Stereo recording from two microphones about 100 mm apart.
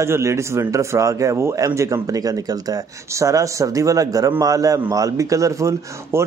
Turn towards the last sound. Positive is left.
turn(degrees=-30)  # may be behind; listen again after turning